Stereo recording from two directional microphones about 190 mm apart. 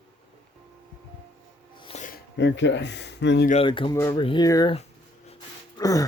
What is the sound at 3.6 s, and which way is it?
Speech, 25° left (ahead or behind).